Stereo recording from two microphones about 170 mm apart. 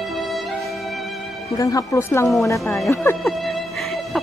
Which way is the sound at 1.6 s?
20° left (ahead or behind).